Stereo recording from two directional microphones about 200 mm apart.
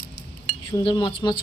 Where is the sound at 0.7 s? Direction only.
20° left (ahead or behind).